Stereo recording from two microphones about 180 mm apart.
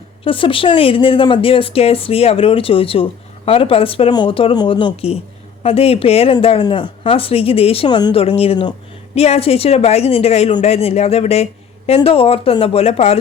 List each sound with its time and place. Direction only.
0.3 s speech: 30° left (ahead or behind)